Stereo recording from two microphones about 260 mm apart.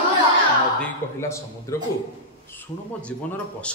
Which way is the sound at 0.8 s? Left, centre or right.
Centre.